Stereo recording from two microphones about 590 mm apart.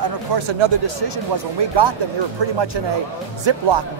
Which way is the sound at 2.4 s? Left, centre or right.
Right.